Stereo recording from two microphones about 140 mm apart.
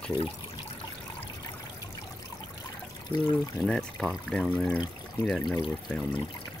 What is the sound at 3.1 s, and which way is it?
Speech, 35° left (ahead or behind).